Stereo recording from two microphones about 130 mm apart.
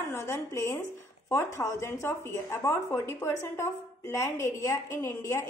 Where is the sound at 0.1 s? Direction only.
20° left (ahead or behind).